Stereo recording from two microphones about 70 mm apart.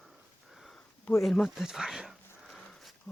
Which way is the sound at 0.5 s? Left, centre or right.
Centre.